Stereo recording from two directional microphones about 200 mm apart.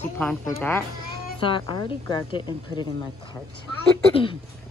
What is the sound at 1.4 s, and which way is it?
A woman's voice, 25° left (ahead or behind).